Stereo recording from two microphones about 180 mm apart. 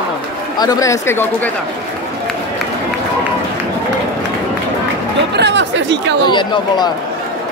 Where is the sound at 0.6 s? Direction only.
20° left (ahead or behind).